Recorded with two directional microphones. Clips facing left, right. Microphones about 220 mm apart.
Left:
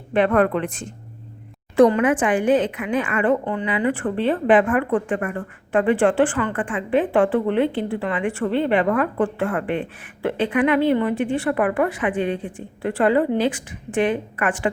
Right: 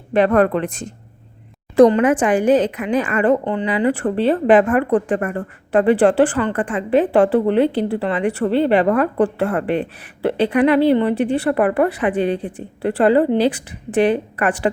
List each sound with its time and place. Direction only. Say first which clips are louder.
0.1 s a woman's voice: right 3 dB; 40° right (ahead or behind)